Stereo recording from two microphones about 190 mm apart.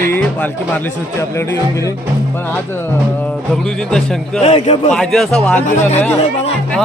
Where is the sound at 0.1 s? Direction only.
10° left (ahead or behind).